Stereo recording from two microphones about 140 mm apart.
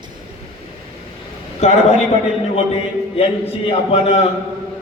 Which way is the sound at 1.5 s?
55° left (ahead or behind).